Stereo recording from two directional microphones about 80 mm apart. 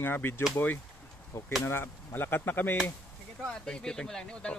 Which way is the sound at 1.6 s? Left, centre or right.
Left.